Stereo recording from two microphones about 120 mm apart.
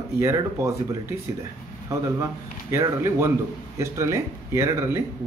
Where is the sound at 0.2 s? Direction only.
25° right (ahead or behind).